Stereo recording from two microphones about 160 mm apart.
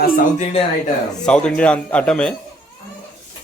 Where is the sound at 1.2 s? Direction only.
5° left (ahead or behind).